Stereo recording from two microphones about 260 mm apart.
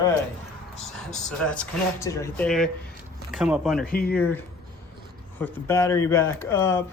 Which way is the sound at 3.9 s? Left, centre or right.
Left.